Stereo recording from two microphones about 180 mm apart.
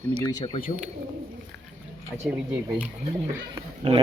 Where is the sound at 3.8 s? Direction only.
30° right (ahead or behind).